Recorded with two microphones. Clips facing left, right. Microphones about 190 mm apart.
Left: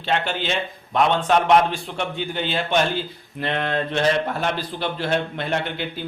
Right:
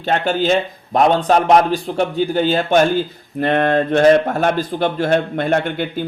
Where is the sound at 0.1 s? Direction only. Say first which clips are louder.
Right 8 dB; 40° right (ahead or behind).